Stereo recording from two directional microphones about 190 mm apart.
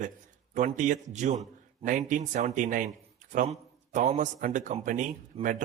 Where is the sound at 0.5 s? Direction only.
40° right (ahead or behind).